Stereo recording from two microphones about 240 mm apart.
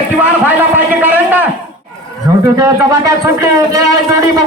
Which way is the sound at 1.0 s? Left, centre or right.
Centre.